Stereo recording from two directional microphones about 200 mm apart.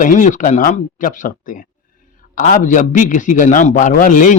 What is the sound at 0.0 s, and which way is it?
A man's voice, 40° left (ahead or behind).